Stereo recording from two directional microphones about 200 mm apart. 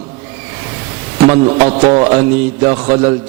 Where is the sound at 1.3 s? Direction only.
30° right (ahead or behind).